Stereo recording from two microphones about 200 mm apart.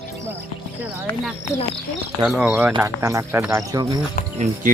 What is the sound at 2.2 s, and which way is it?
Speech, 5° right (ahead or behind).